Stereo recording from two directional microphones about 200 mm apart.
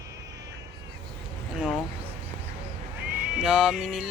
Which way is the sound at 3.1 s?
5° right (ahead or behind).